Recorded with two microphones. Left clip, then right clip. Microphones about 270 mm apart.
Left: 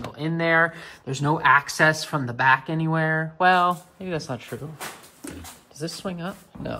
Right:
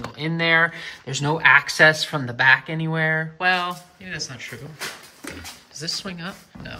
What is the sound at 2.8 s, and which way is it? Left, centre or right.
Speech, centre.